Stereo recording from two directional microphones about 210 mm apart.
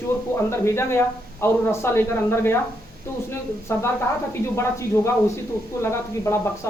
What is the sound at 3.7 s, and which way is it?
Speech, 10° left (ahead or behind).